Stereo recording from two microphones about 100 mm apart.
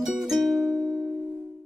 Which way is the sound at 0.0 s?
Centre (ahead or behind).